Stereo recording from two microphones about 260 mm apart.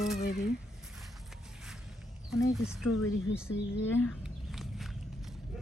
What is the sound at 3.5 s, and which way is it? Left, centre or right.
Speech, left.